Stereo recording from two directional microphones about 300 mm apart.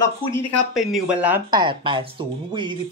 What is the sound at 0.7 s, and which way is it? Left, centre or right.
Speech, centre.